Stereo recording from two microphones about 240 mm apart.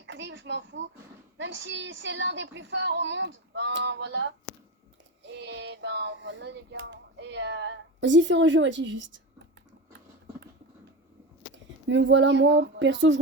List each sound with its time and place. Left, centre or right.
0.0 s a sound: right
1.4 s speech: right
11.5 s speech: right